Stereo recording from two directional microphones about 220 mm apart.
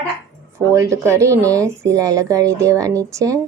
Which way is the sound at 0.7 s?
15° right (ahead or behind).